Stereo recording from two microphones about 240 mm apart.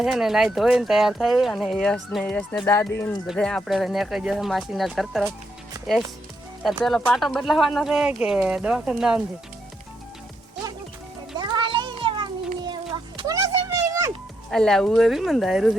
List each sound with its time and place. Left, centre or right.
0.0 s speech: centre
6.6 s speech: centre
11.3 s a sound: centre
14.5 s speech: centre